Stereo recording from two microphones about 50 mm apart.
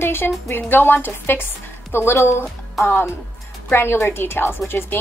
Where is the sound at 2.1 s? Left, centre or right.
Left.